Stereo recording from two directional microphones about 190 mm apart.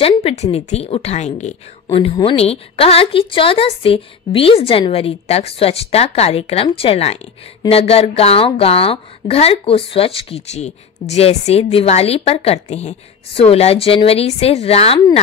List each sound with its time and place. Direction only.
0.0 s a woman's voice: 30° left (ahead or behind)